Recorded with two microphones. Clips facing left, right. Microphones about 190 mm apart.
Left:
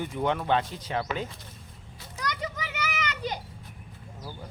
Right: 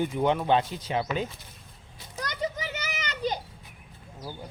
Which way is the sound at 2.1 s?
30° right (ahead or behind).